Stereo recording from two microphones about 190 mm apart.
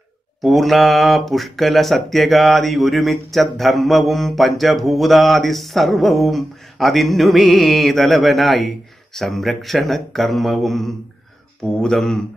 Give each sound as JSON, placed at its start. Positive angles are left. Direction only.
{"t": 0.4, "sound": "speech", "side_deg": 0}